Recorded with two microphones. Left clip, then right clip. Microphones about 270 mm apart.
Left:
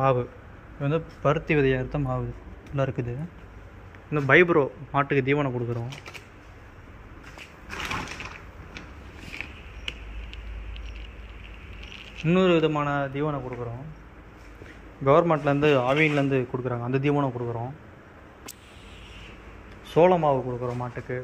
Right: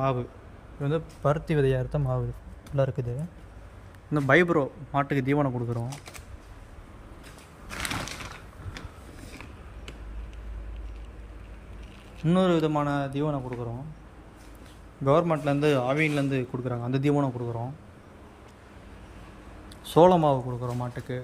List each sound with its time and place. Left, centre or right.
0.0 s a man's voice: centre; by 3.1 s right
4.1 s a man's voice: centre
11.9 s a man's voice: centre
15.0 s a man's voice: centre
19.9 s speech: right